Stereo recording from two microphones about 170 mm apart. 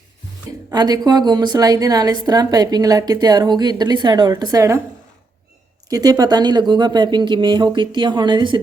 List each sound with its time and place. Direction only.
0.7 s a woman's voice: 25° right (ahead or behind)
5.9 s a woman's voice: 20° right (ahead or behind)